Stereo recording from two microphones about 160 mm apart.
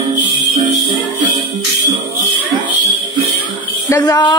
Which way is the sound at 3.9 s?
25° left (ahead or behind).